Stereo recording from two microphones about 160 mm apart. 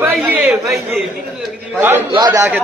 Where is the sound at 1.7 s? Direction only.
15° right (ahead or behind).